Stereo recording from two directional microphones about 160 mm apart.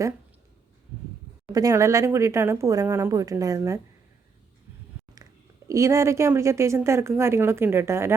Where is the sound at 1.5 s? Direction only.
20° right (ahead or behind).